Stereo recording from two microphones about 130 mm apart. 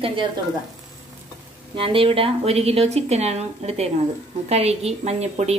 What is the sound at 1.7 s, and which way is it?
A woman's voice, 45° right (ahead or behind).